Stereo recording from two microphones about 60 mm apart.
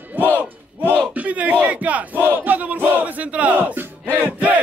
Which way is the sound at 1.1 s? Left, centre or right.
Right.